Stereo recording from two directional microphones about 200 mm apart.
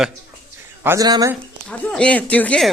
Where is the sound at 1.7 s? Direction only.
5° left (ahead or behind).